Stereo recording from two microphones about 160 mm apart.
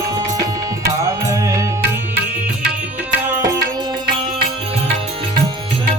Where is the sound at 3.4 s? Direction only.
20° right (ahead or behind).